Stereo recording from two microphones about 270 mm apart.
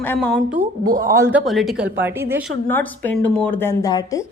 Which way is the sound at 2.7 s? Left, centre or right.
Centre.